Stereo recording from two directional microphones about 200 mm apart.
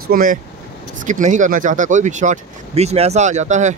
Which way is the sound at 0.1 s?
45° right (ahead or behind).